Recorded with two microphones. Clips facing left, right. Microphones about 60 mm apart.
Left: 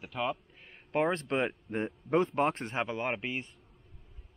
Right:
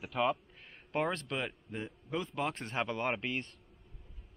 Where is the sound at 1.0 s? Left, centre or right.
Left; by 3.5 s centre.